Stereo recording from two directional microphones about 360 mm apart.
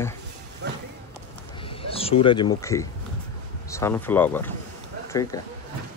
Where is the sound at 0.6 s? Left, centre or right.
Right.